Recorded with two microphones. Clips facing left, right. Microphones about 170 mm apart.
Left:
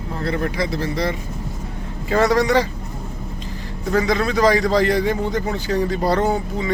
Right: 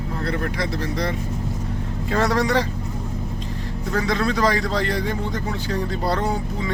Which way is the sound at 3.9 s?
5° left (ahead or behind).